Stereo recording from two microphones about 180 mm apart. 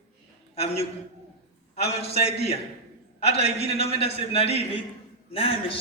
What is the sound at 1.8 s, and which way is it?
Speech, 35° left (ahead or behind).